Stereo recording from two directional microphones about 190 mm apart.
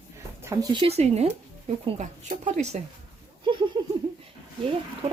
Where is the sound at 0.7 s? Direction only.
30° right (ahead or behind).